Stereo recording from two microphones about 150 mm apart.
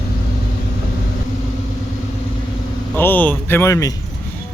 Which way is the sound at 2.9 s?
10° left (ahead or behind).